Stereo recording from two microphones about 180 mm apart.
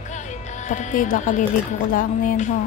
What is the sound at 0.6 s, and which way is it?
Music, 45° left (ahead or behind).